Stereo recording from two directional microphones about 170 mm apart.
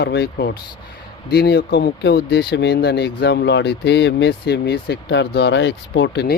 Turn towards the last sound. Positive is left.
turn(degrees=85)